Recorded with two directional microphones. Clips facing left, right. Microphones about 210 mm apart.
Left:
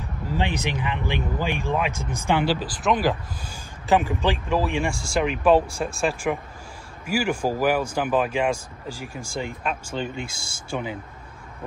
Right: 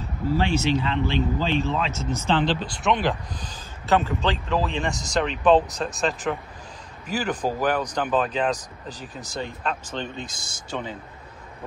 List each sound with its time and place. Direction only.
0.3 s speech: 15° left (ahead or behind)